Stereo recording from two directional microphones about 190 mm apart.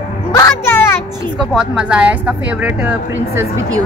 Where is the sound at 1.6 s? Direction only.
5° right (ahead or behind).